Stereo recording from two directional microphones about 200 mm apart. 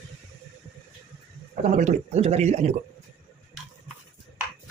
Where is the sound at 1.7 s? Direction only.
35° right (ahead or behind).